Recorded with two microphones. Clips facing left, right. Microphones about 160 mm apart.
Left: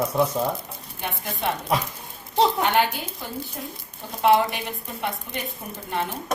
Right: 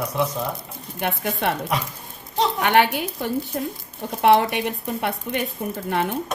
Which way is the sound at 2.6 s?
70° right (ahead or behind).